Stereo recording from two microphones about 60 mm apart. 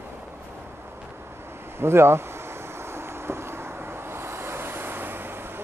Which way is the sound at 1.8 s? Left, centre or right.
Right.